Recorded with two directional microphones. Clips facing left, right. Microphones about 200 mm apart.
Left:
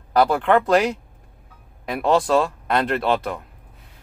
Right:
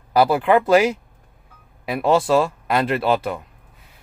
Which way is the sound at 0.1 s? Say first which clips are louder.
Right 1 dB; 5° right (ahead or behind).